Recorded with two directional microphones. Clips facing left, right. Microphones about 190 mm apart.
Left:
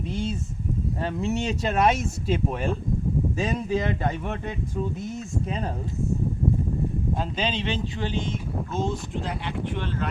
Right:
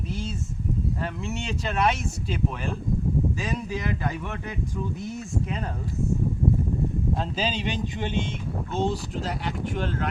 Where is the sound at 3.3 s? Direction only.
25° left (ahead or behind).